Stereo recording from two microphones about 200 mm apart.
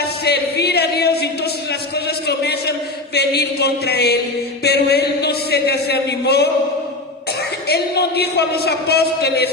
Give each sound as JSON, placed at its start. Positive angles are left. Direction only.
{"t": 0.0, "sound": "a sound", "side_deg": 55}
{"t": 3.2, "sound": "speech", "side_deg": 55}
{"t": 7.7, "sound": "speech", "side_deg": 55}